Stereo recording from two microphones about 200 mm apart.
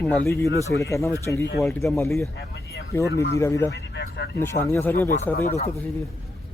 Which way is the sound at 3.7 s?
55° left (ahead or behind).